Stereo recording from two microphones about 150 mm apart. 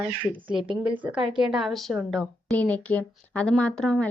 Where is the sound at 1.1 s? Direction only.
5° right (ahead or behind).